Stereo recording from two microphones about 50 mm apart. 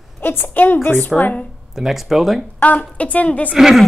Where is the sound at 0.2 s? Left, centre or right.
Left.